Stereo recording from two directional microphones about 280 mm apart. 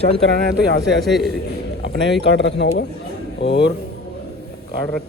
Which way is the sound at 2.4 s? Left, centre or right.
Left.